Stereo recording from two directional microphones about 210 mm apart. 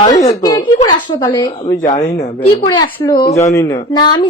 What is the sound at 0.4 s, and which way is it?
Speech, 20° left (ahead or behind).